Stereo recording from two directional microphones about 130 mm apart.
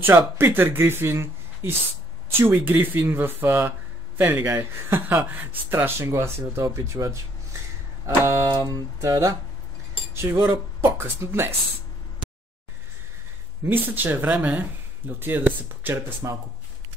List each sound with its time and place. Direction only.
0.4 s speech: 20° right (ahead or behind)
8.2 s music: 20° right (ahead or behind)
10.2 s speech: 15° right (ahead or behind)
10.8 s music: 20° right (ahead or behind)
13.7 s speech: 15° right (ahead or behind)